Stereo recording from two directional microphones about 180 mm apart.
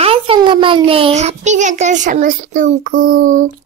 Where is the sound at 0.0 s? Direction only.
30° right (ahead or behind).